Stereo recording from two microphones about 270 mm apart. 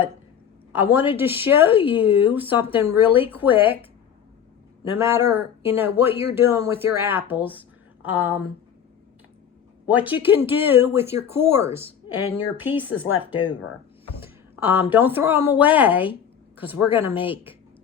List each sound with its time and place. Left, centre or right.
0.7 s a woman's voice: centre
4.9 s speech: centre
9.8 s speech: centre
13.1 s speech: left
14.2 s a sound: centre
14.9 s a woman's voice: centre